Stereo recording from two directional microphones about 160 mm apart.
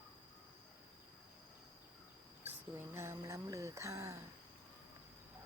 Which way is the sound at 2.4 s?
15° right (ahead or behind).